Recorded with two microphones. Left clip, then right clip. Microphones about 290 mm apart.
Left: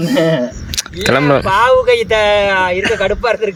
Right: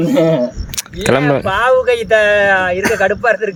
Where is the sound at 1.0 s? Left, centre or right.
Centre.